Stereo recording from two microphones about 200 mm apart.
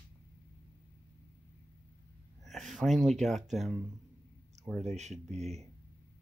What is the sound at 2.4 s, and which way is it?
Speech, centre (ahead or behind).